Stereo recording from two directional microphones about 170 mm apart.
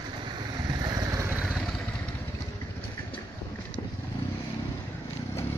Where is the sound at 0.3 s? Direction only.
25° right (ahead or behind); by 1.7 s centre (ahead or behind).